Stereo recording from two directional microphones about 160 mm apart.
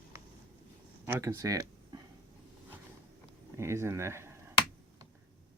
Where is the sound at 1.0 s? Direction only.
15° right (ahead or behind).